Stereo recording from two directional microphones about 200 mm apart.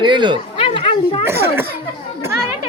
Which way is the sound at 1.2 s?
10° right (ahead or behind).